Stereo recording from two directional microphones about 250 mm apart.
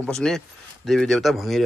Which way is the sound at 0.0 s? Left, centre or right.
Centre.